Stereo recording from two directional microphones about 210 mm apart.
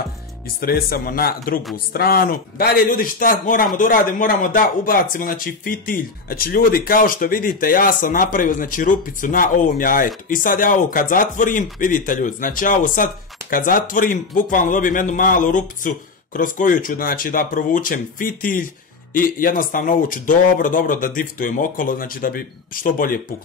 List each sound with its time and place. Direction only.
0.6 s a man's voice: 45° left (ahead or behind)